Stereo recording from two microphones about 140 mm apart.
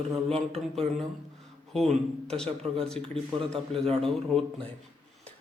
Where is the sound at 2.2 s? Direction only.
5° left (ahead or behind).